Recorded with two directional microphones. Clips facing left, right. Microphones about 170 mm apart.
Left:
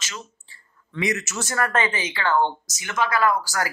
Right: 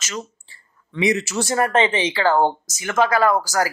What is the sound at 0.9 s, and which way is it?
Speech, 25° right (ahead or behind).